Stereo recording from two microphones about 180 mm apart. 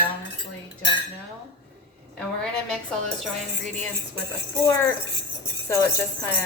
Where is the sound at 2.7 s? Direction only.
Centre (ahead or behind).